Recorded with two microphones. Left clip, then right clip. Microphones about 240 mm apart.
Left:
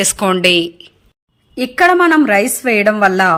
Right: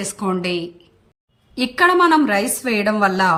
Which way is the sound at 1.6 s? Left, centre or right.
Centre.